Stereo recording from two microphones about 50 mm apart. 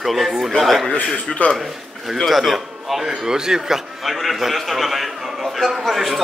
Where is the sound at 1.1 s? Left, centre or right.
Left.